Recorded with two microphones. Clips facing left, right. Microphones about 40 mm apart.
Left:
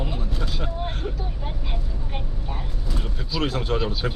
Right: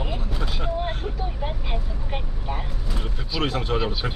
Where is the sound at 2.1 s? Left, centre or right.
Centre.